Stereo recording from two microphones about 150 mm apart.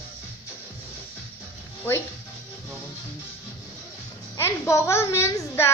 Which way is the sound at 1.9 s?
15° left (ahead or behind).